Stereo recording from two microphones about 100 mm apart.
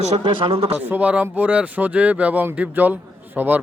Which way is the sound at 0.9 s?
15° right (ahead or behind).